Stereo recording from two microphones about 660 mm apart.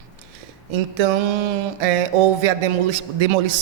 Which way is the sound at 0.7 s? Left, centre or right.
Right.